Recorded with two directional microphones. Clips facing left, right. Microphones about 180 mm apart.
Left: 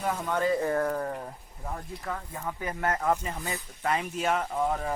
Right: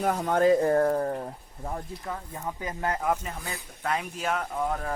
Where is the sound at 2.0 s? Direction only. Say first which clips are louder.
Left 2 dB; 20° right (ahead or behind).